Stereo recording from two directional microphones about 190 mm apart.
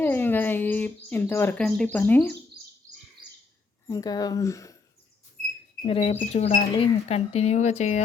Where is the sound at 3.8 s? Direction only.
20° left (ahead or behind).